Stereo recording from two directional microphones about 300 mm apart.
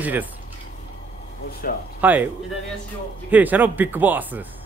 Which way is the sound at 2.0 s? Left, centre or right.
Centre.